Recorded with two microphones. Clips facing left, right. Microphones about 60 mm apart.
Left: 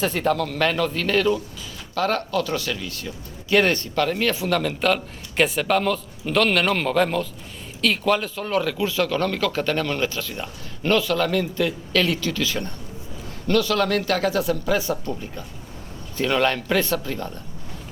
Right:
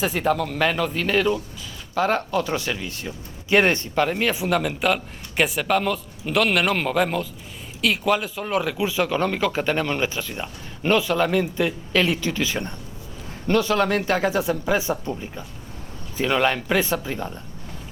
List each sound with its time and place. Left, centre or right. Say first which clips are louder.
0.0 s a man's voice: even; centre
16.1 s speech: even; centre